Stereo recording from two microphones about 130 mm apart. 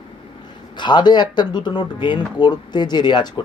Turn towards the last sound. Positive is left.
turn(degrees=35)  # may be behind; listen again after turning